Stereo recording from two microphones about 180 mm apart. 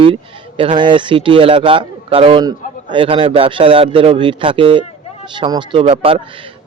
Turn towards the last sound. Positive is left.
turn(degrees=-30)  # may be behind; listen again after turning